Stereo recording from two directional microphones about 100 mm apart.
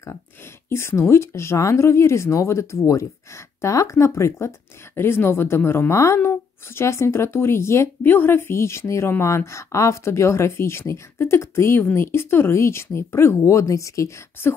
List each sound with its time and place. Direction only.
0.7 s speech: 25° left (ahead or behind)